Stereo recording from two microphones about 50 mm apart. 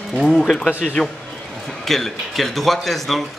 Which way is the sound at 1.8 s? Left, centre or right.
Centre.